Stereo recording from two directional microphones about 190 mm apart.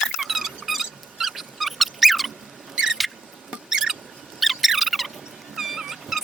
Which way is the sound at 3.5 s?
5° right (ahead or behind).